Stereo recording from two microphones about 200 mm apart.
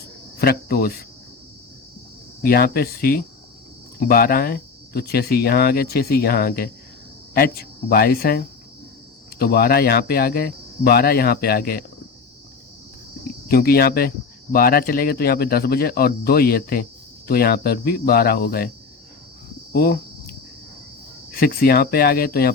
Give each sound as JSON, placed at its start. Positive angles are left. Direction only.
{"t": 0.3, "sound": "speech", "side_deg": 50}
{"t": 2.4, "sound": "speech", "side_deg": 50}
{"t": 13.5, "sound": "speech", "side_deg": 50}
{"t": 19.7, "sound": "speech", "side_deg": 50}
{"t": 21.3, "sound": "speech", "side_deg": 50}